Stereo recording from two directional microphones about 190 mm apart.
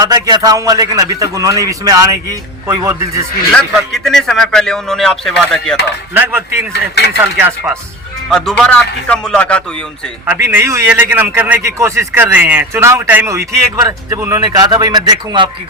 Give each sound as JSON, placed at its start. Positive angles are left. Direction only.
{"t": 0.0, "sound": "a man's voice", "side_deg": -20}
{"t": 3.5, "sound": "a man's voice", "side_deg": 0}
{"t": 6.1, "sound": "a man's voice", "side_deg": -10}
{"t": 6.9, "sound": "speech", "side_deg": 60}
{"t": 7.3, "sound": "a man's voice", "side_deg": -10}
{"t": 8.3, "sound": "a man's voice", "side_deg": 5}
{"t": 10.2, "sound": "a man's voice", "side_deg": -10}